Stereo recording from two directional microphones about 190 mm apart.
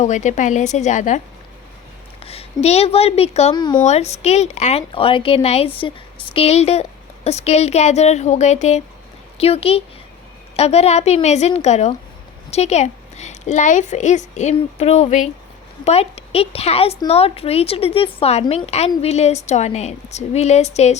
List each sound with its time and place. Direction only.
0.0 s a woman's voice: 40° left (ahead or behind)
2.2 s speech: 30° left (ahead or behind)
3.5 s speech: 25° left (ahead or behind)
3.8 s a woman's voice: 35° left (ahead or behind)